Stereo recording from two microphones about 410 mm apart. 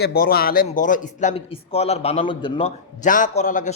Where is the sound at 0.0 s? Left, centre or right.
Left.